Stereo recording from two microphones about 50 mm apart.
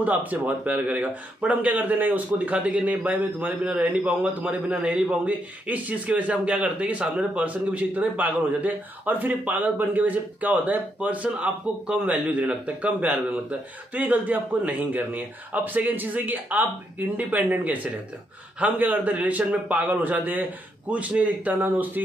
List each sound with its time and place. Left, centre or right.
0.0 s a man's voice: right